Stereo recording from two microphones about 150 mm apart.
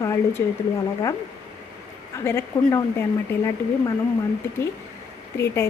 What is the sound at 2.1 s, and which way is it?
Speech, 15° left (ahead or behind).